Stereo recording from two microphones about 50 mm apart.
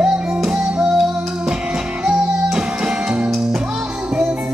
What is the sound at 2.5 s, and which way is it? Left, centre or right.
Music, centre.